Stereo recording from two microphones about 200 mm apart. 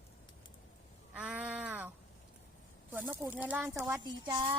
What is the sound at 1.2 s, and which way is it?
Speech, 5° right (ahead or behind).